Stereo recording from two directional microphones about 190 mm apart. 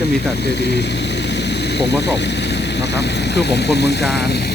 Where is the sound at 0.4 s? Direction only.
60° left (ahead or behind).